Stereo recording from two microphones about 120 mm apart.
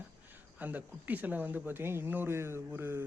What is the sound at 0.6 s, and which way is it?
Speech, 15° right (ahead or behind).